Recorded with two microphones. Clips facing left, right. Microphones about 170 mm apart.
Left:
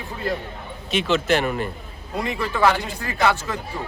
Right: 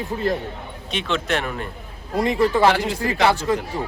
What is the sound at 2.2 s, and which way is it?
A man's voice, 35° right (ahead or behind).